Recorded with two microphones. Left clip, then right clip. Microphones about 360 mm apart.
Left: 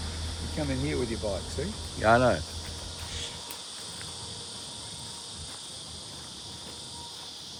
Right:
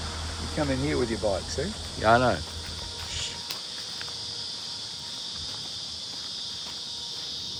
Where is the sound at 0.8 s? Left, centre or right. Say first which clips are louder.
Right 2 dB; centre.